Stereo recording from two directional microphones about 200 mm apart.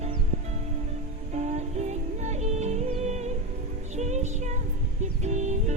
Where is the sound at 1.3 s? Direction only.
35° right (ahead or behind).